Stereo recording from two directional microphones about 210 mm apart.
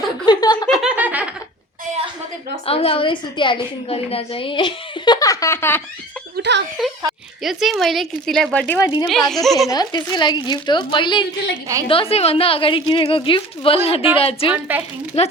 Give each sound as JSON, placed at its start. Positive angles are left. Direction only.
{"t": 0.3, "sound": "a sound", "side_deg": 20}
{"t": 0.8, "sound": "snicker", "side_deg": -5}
{"t": 2.6, "sound": "a woman's voice", "side_deg": 25}
{"t": 6.3, "sound": "a sound", "side_deg": -55}
{"t": 7.4, "sound": "a woman's voice", "side_deg": 0}
{"t": 9.6, "sound": "a woman's voice", "side_deg": 20}
{"t": 14.5, "sound": "a woman's voice", "side_deg": -5}
{"t": 15.1, "sound": "a woman's voice", "side_deg": 30}